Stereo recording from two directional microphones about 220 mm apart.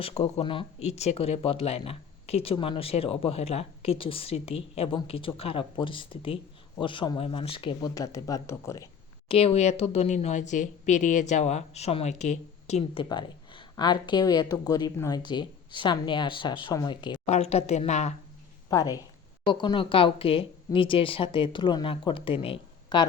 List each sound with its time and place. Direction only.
0.0 s speech: 30° left (ahead or behind)
9.3 s speech: 25° left (ahead or behind)
18.7 s a woman's voice: 15° left (ahead or behind)